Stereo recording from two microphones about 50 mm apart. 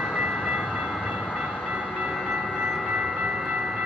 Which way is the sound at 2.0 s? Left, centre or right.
Centre.